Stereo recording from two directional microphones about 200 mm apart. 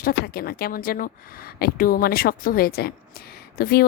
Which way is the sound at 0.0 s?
50° left (ahead or behind).